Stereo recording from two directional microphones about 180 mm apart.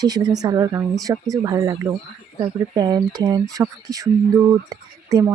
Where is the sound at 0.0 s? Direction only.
20° right (ahead or behind).